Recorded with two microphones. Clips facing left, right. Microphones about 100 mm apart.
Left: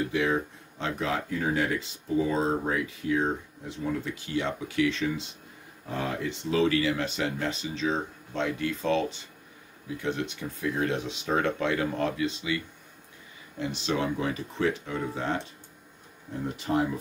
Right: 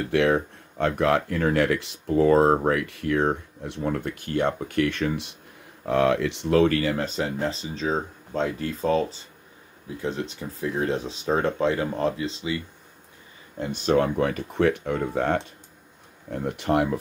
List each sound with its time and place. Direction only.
0.0 s speech: 70° right (ahead or behind)
5.9 s speech: 80° right; by 12.6 s 30° right (ahead or behind)
13.6 s speech: 50° right (ahead or behind); by 16.8 s 65° right (ahead or behind)